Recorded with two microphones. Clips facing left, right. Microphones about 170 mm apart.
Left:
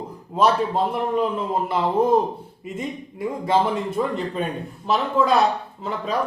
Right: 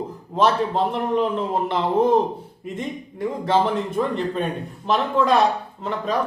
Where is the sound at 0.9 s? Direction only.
5° left (ahead or behind).